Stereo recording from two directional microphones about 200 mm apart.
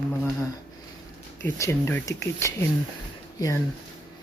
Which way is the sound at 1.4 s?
10° left (ahead or behind).